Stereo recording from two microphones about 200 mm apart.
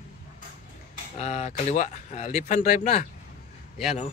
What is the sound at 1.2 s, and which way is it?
A man's voice, 35° left (ahead or behind).